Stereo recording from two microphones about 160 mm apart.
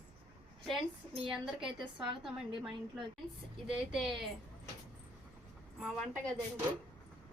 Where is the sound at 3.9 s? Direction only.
Centre (ahead or behind).